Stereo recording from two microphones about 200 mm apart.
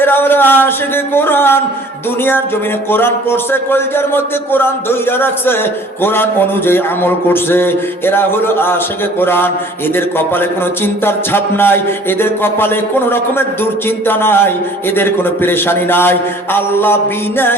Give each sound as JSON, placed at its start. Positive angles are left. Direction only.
{"t": 0.0, "sound": "a man's voice", "side_deg": 10}
{"t": 2.9, "sound": "a man's voice", "side_deg": 10}